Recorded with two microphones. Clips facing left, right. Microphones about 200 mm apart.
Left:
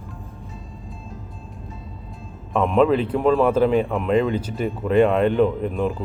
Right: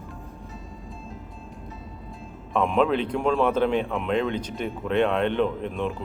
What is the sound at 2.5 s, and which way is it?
A man's voice, centre (ahead or behind).